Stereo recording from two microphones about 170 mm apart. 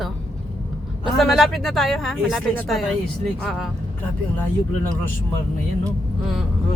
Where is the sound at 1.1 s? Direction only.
Centre (ahead or behind).